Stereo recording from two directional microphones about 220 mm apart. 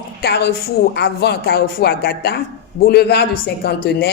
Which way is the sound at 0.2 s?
45° left (ahead or behind).